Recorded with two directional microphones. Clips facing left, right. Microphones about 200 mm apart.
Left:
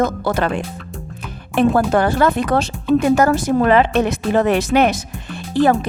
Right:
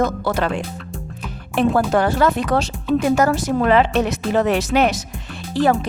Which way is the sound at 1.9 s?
55° left (ahead or behind).